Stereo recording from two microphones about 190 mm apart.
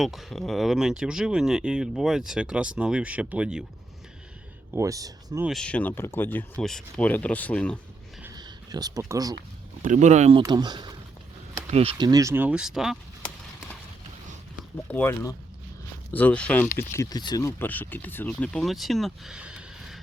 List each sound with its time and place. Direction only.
0.0 s speech: centre (ahead or behind)
4.7 s speech: 15° right (ahead or behind)
5.5 s speech: 5° left (ahead or behind)
8.2 s a sound: 20° right (ahead or behind)
9.8 s speech: 40° right (ahead or behind)
10.4 s speech: 20° right (ahead or behind); by 13.3 s centre (ahead or behind)
14.8 s speech: 10° left (ahead or behind)